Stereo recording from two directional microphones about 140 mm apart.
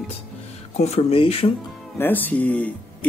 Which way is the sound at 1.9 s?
15° left (ahead or behind).